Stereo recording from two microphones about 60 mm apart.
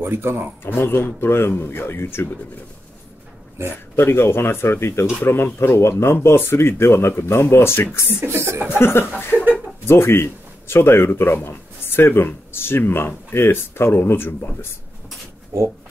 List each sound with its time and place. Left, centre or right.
0.0 s speech: right
0.7 s speech: left
3.9 s speech: left
8.3 s chuckle: right
8.6 s speech: left
9.3 s a sound: right
9.8 s speech: left
15.5 s speech: right